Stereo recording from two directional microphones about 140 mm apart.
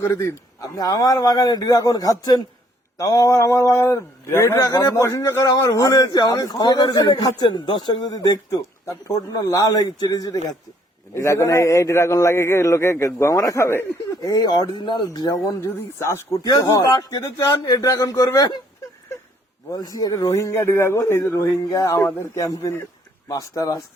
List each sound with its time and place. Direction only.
0.0 s a man's voice: 20° left (ahead or behind)
19.7 s a man's voice: 25° left (ahead or behind)